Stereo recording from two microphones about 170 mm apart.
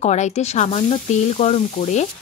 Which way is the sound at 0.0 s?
40° left (ahead or behind).